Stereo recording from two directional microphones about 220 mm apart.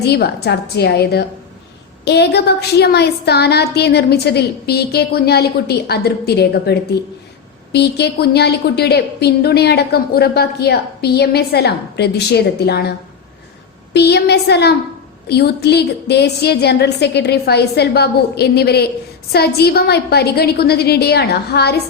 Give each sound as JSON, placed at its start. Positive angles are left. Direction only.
{"t": 0.0, "sound": "a woman's voice", "side_deg": 45}
{"t": 13.9, "sound": "a woman's voice", "side_deg": 50}